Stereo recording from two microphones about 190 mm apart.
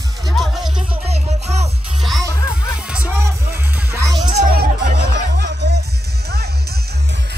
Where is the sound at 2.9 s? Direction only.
10° right (ahead or behind).